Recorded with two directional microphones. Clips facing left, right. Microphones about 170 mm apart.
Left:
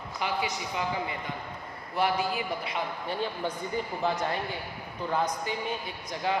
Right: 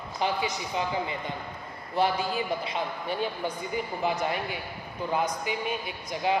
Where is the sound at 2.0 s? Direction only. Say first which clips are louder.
Right 1 dB; 25° right (ahead or behind).